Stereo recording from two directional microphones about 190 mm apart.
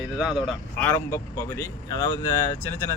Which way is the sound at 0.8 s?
15° left (ahead or behind).